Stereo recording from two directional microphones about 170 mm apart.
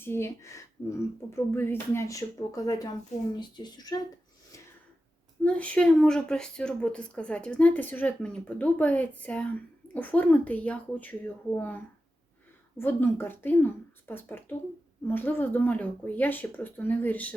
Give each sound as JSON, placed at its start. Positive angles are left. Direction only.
{"t": 0.0, "sound": "speech", "side_deg": 15}
{"t": 5.4, "sound": "speech", "side_deg": 10}